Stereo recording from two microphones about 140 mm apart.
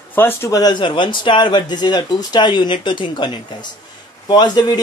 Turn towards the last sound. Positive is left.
turn(degrees=30)  # may be behind; listen again after turning